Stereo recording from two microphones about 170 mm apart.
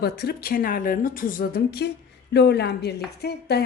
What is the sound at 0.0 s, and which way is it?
A woman's voice, 65° left (ahead or behind).